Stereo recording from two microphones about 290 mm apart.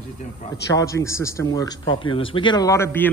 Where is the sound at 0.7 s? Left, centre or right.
Centre.